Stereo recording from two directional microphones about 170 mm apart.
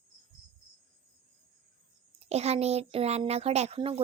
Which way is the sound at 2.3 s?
40° right (ahead or behind).